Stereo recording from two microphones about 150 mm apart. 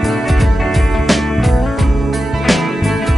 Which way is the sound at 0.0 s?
Centre (ahead or behind).